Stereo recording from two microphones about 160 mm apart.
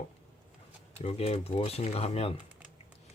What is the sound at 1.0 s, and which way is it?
Speech, 40° left (ahead or behind).